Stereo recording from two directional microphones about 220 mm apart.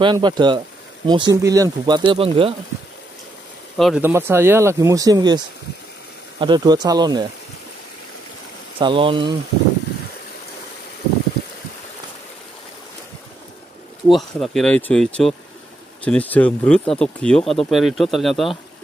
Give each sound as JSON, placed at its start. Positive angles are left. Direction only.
{"t": 0.0, "sound": "speech", "side_deg": -20}
{"t": 3.7, "sound": "speech", "side_deg": 0}
{"t": 6.4, "sound": "speech", "side_deg": -20}
{"t": 8.7, "sound": "speech", "side_deg": -25}
{"t": 14.0, "sound": "speech", "side_deg": 0}